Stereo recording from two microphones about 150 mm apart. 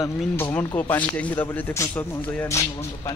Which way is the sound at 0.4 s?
10° left (ahead or behind).